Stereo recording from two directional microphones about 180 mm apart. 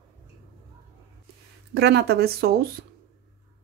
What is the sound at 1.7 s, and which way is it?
A woman's voice, 70° right (ahead or behind).